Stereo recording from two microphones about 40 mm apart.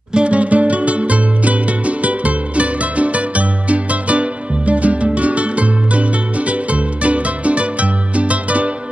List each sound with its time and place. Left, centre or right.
0.1 s music: right